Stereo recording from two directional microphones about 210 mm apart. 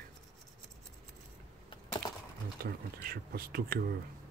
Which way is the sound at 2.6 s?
45° right (ahead or behind).